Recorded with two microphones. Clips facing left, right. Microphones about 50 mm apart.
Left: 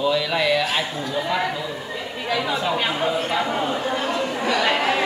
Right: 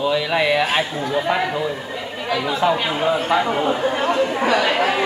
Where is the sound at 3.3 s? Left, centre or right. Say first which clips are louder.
Right 4 dB; centre.